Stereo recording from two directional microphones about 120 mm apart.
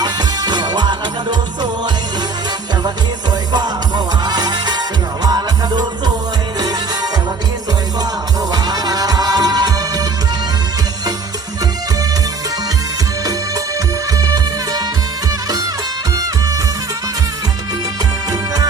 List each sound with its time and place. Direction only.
0.0 s music: 35° right (ahead or behind)
3.5 s music: 35° right (ahead or behind)
8.4 s music: 35° right (ahead or behind)
14.1 s music: 30° right (ahead or behind)